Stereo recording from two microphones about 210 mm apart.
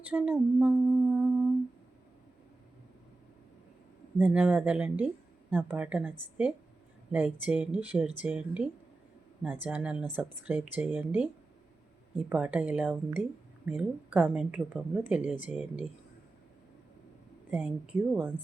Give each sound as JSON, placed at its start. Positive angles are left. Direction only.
{"t": 0.1, "sound": "a sound", "side_deg": -5}
{"t": 4.2, "sound": "speech", "side_deg": -5}
{"t": 17.5, "sound": "speech", "side_deg": -5}